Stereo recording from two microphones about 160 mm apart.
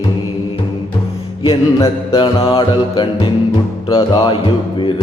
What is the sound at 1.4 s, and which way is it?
Music, 25° left (ahead or behind).